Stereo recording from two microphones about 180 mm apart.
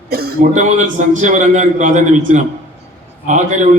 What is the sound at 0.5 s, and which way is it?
A man's voice, 40° right (ahead or behind).